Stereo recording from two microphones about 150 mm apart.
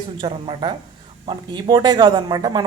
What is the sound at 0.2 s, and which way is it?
Speech, 35° right (ahead or behind).